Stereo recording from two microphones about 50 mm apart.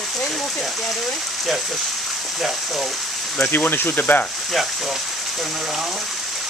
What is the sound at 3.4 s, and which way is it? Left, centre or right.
Speech, left.